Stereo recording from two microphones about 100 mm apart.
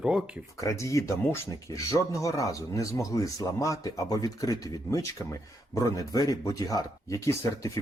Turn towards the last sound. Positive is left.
turn(degrees=30)  # may be behind; listen again after turning